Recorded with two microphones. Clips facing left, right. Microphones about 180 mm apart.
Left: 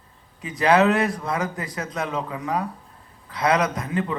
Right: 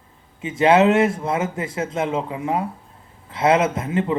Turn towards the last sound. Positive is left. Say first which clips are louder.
# right 4 dB
turn(degrees=-25)  # may be behind; listen again after turning